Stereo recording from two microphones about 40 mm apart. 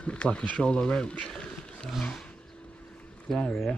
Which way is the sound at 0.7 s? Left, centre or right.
Left.